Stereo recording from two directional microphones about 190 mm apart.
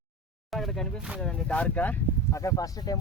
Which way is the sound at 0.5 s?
Centre (ahead or behind).